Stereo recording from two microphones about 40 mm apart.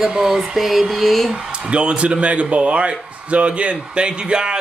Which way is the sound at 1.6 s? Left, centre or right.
Right.